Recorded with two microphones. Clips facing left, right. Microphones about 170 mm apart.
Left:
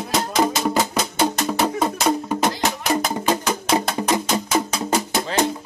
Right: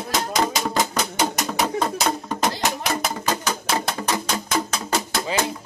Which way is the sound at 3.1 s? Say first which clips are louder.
Left 4 dB; 20° left (ahead or behind).